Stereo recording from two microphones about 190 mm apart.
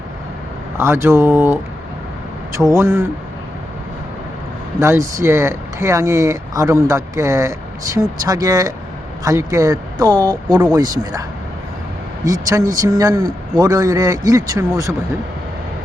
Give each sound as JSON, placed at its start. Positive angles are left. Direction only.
{"t": 0.8, "sound": "speech", "side_deg": -15}
{"t": 4.8, "sound": "speech", "side_deg": -15}